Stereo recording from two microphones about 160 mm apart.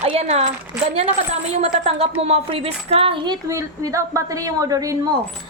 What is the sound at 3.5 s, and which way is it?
Speech, 20° right (ahead or behind).